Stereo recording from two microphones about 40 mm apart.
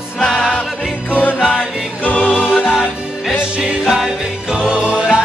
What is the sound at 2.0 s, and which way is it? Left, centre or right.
Music, left.